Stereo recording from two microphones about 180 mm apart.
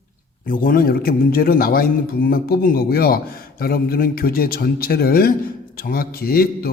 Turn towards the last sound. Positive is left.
turn(degrees=55)  # may be behind; listen again after turning